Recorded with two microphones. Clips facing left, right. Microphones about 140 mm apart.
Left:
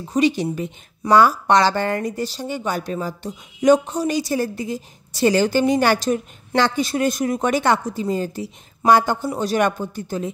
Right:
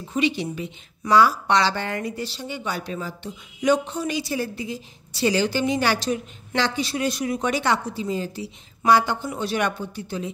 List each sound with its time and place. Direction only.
0.1 s speech: 45° left (ahead or behind)